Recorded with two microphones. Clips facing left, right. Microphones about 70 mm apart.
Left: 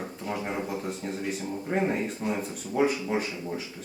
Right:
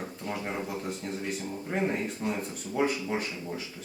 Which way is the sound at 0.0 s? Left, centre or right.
Centre.